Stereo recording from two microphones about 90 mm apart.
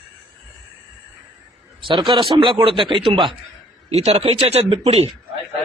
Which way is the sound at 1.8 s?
65° right (ahead or behind).